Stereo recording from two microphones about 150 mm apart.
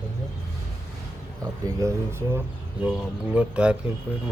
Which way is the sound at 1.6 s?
20° right (ahead or behind).